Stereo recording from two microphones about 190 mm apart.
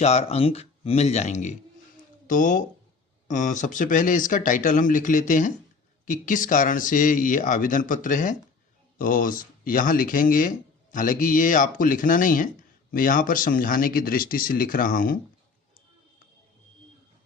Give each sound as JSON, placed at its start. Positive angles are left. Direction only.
{"t": 0.0, "sound": "speech", "side_deg": 35}